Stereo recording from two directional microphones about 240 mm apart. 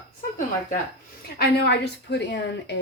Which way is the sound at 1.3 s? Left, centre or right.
Left.